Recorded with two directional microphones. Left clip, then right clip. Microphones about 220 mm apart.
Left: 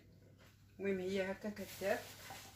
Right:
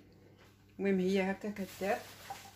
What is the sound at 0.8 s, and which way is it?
Speech, 45° right (ahead or behind).